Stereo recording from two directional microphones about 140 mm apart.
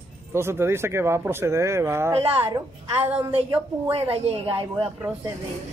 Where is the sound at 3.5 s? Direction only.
45° right (ahead or behind).